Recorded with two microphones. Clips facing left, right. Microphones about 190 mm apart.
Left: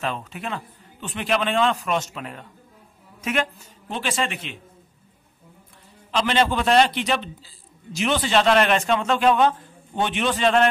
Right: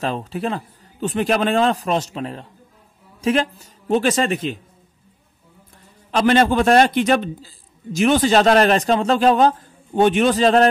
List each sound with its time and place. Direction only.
0.0 s a man's voice: 35° right (ahead or behind)
6.1 s a man's voice: 45° right (ahead or behind)